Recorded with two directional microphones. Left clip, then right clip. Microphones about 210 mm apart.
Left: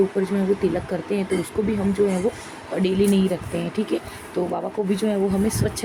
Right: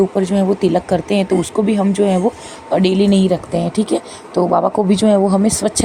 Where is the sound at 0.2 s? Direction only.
35° right (ahead or behind).